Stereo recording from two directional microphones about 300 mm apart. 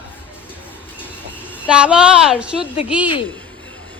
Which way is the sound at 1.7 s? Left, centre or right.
Centre.